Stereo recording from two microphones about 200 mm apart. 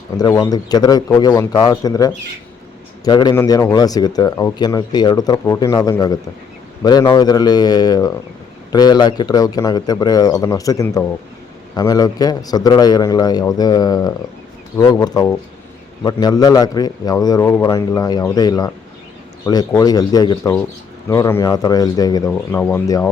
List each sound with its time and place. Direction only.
0.2 s speech: 20° left (ahead or behind)